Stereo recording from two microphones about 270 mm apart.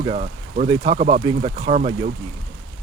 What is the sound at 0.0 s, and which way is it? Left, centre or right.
Speech, right.